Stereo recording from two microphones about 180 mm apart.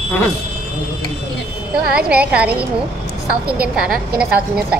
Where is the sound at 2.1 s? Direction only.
5° right (ahead or behind).